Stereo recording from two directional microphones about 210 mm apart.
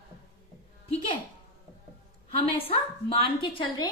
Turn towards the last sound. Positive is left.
turn(degrees=25)  # may be behind; listen again after turning